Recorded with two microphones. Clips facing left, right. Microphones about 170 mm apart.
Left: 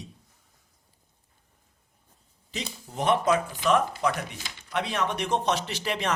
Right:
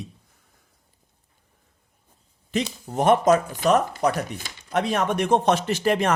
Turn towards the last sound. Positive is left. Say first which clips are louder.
# right 8 dB
turn(degrees=-50)  # may be behind; listen again after turning